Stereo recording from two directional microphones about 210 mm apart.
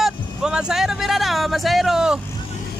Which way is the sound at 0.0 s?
5° right (ahead or behind).